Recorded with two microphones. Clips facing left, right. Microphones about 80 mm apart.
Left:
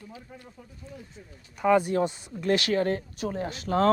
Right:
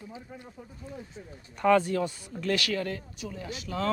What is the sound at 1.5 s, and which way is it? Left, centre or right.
Speech, centre.